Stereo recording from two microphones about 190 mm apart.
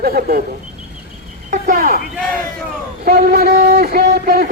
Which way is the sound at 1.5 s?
45° right (ahead or behind).